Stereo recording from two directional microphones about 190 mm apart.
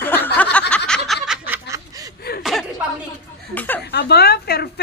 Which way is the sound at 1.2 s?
5° right (ahead or behind).